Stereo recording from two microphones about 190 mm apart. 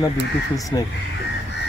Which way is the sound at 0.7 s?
20° left (ahead or behind).